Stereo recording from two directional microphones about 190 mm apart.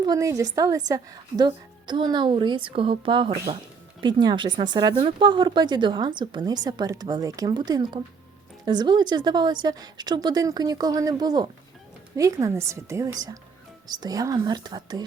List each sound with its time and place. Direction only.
0.0 s a woman's voice: 20° right (ahead or behind)